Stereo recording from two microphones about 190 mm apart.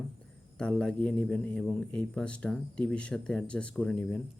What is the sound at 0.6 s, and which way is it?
Speech, 5° left (ahead or behind).